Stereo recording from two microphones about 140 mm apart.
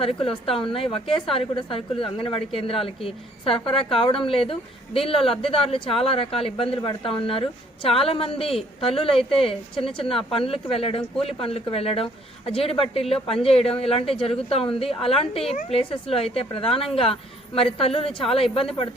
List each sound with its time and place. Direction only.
0.0 s a woman's voice: 40° left (ahead or behind)